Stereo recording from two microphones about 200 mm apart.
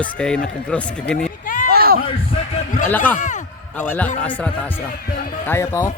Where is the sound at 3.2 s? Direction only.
40° left (ahead or behind).